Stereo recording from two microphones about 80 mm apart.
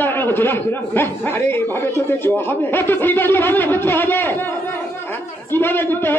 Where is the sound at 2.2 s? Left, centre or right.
Left.